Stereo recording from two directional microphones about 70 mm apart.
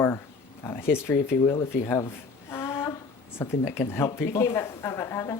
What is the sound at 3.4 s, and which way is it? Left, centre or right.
Speech, left.